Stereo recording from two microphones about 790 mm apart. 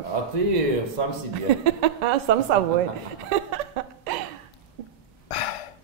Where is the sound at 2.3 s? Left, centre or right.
Right.